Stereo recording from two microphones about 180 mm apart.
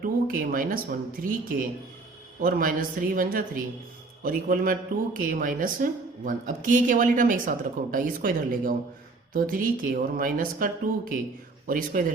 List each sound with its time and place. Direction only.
0.0 s speech: 50° right (ahead or behind)